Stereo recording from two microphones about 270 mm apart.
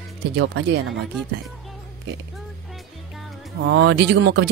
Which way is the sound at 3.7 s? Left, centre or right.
Right.